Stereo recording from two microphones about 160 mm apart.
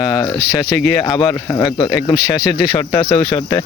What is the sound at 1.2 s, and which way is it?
Speech, 25° left (ahead or behind).